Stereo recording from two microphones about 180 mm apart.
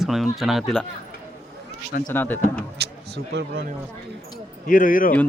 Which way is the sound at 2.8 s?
65° right (ahead or behind).